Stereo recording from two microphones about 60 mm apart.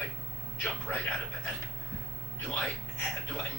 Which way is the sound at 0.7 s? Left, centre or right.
Centre.